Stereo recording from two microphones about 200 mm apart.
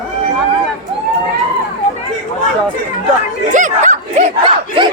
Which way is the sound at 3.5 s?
40° right (ahead or behind).